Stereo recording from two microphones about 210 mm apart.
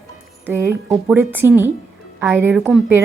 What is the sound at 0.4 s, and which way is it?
A woman's voice, 15° right (ahead or behind).